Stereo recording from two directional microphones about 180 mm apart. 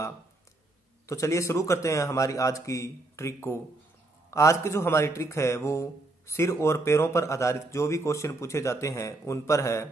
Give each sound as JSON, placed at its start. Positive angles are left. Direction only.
{"t": 1.0, "sound": "a man's voice", "side_deg": 15}